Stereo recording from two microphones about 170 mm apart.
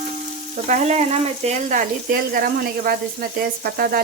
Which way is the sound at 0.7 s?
45° right (ahead or behind).